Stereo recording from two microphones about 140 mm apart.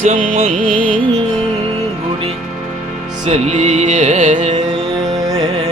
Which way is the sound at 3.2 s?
55° right (ahead or behind).